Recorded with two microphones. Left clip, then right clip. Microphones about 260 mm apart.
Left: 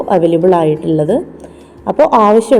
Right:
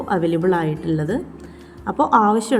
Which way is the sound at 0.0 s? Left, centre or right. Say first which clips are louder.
Left 9 dB; centre.